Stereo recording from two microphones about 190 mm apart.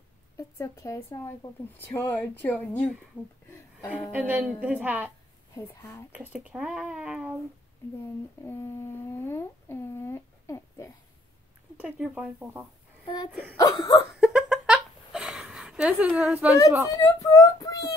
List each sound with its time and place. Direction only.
0.4 s speech: 15° left (ahead or behind)
4.1 s a woman's voice: 10° right (ahead or behind)
6.1 s speech: 5° right (ahead or behind)
8.5 s speech: 15° left (ahead or behind)
11.7 s speech: 5° right (ahead or behind)
13.6 s a sound: 20° left (ahead or behind)
14.2 s a sound: 5° right (ahead or behind)
16.8 s speech: 20° left (ahead or behind)